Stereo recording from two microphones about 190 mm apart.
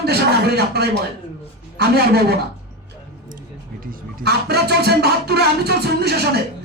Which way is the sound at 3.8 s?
55° right (ahead or behind).